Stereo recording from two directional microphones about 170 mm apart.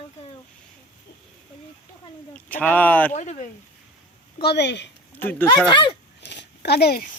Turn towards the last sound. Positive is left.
turn(degrees=70)  # may be behind; listen again after turning